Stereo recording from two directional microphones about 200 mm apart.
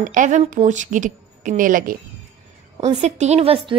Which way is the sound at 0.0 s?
40° right (ahead or behind).